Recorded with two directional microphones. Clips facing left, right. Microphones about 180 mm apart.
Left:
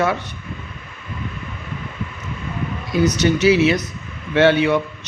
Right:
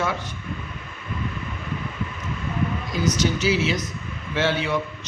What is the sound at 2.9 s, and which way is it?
A man's voice, 65° left (ahead or behind).